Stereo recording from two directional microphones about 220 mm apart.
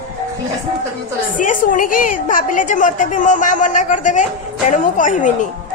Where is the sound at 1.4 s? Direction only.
35° left (ahead or behind).